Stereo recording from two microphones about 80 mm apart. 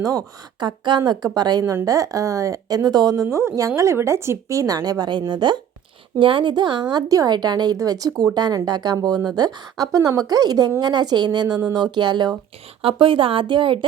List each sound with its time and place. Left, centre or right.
0.0 s a woman's voice: right
0.6 s a woman's voice: right
3.2 s a woman's voice: right
6.1 s speech: right
12.9 s speech: right